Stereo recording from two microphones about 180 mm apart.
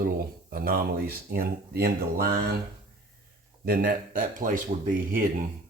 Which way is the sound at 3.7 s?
50° right (ahead or behind).